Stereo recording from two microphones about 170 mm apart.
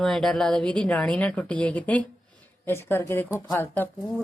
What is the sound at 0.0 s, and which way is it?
Speech, centre (ahead or behind).